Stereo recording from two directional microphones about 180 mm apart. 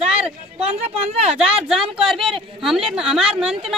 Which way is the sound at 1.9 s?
Centre (ahead or behind).